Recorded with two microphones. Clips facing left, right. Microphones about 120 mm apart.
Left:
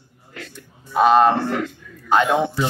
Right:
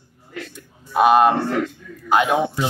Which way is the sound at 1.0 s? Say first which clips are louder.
Even; 15° right (ahead or behind).